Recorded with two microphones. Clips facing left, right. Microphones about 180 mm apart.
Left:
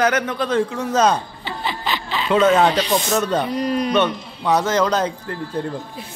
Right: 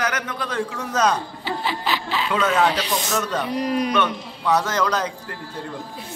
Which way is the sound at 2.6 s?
5° right (ahead or behind).